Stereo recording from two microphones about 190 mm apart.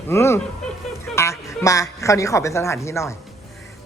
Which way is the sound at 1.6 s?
15° left (ahead or behind).